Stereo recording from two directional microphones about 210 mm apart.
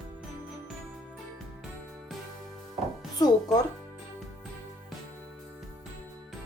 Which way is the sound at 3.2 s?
20° left (ahead or behind).